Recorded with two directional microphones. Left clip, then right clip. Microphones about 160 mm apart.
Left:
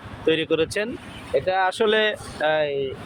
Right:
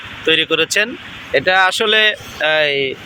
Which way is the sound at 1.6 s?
15° left (ahead or behind).